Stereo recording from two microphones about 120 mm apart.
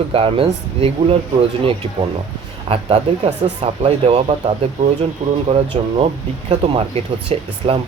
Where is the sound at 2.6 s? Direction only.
55° right (ahead or behind).